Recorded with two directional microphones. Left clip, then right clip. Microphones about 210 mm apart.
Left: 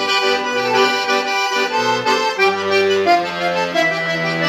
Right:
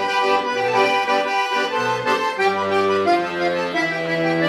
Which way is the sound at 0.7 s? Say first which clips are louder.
Left 2 dB; 10° left (ahead or behind).